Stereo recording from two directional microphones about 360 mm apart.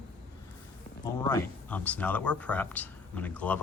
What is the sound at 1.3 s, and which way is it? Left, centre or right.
Speech, centre.